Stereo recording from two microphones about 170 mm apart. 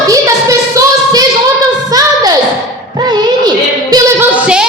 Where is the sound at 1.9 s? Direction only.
20° right (ahead or behind).